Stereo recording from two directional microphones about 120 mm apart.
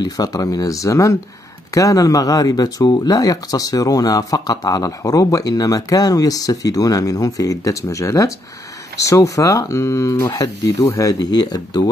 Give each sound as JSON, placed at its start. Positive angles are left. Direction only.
{"t": 0.0, "sound": "speech", "side_deg": 30}